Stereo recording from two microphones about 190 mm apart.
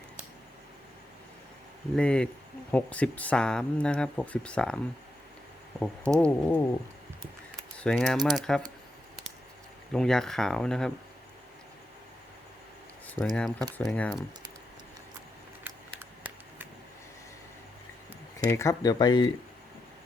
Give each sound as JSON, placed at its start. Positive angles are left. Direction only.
{"t": 2.0, "sound": "speech", "side_deg": 5}
{"t": 6.1, "sound": "a sound", "side_deg": 5}
{"t": 7.8, "sound": "speech", "side_deg": 5}
{"t": 9.9, "sound": "speech", "side_deg": 5}
{"t": 13.1, "sound": "speech", "side_deg": 0}
{"t": 18.3, "sound": "speech", "side_deg": 15}